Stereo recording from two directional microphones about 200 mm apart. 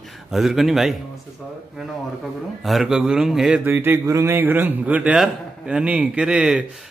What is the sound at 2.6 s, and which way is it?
A man's voice, centre (ahead or behind).